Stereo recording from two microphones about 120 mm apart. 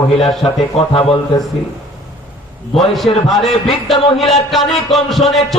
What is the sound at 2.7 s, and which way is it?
Speech, centre (ahead or behind).